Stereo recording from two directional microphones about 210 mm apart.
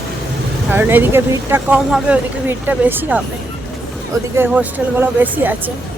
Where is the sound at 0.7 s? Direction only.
10° right (ahead or behind).